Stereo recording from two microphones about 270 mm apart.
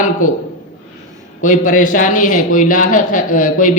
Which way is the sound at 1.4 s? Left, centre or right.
Left.